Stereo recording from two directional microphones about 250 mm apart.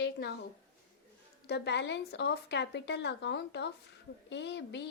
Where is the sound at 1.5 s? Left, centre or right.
Left.